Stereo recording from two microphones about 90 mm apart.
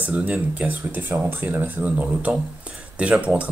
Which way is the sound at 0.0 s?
15° right (ahead or behind).